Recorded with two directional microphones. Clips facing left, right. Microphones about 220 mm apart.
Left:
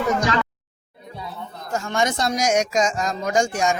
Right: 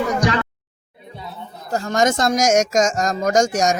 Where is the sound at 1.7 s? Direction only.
40° right (ahead or behind).